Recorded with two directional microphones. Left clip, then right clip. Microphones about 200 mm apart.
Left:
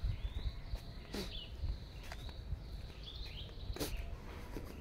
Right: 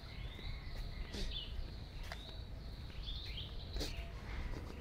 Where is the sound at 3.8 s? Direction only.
35° left (ahead or behind).